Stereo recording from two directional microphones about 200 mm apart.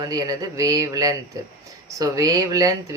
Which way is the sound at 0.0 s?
20° right (ahead or behind).